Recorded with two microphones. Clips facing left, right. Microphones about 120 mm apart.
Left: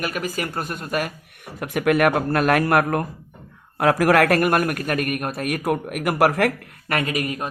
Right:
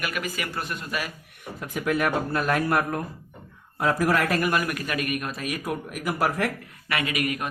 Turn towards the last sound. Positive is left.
turn(degrees=35)  # may be behind; listen again after turning